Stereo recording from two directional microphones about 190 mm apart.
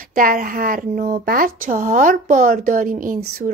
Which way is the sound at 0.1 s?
45° right (ahead or behind).